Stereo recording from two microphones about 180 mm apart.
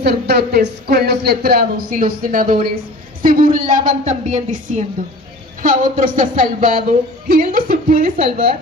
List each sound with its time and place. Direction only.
0.0 s speech: 60° right (ahead or behind)